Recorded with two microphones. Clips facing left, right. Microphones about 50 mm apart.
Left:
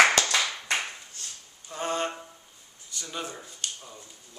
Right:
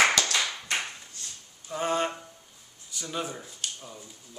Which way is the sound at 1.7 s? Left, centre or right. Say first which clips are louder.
Right 2 dB; centre.